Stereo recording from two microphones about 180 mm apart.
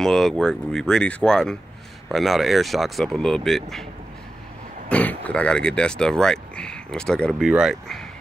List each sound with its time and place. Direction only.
0.0 s speech: centre (ahead or behind)
4.8 s speech: 10° left (ahead or behind)